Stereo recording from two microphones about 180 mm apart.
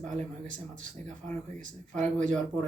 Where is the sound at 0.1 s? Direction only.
45° right (ahead or behind).